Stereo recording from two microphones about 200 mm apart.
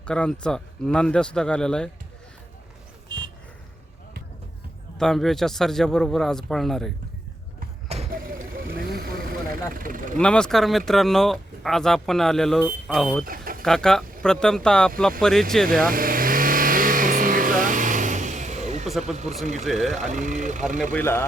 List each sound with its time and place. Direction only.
0.0 s speech: 5° left (ahead or behind)
4.9 s speech: centre (ahead or behind)
8.1 s vehicle: 45° right (ahead or behind)
9.7 s speech: 45° right (ahead or behind)
10.2 s speech: 5° left (ahead or behind)
13.2 s vehicle: 45° right (ahead or behind)
13.6 s speech: 5° left (ahead or behind)
15.8 s vehicle: 45° right (ahead or behind)
18.9 s speech: centre (ahead or behind)
20.0 s speech: 35° right (ahead or behind)
20.9 s a man's voice: 10° left (ahead or behind)